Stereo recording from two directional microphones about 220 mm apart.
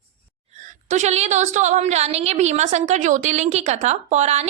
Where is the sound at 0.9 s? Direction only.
30° right (ahead or behind).